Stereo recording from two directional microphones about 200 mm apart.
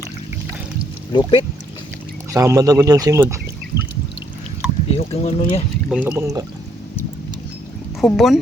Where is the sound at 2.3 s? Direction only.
15° right (ahead or behind).